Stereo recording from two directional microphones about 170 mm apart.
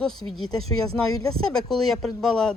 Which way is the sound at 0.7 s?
20° left (ahead or behind).